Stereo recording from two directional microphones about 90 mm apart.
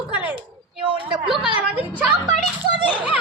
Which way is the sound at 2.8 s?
65° right (ahead or behind).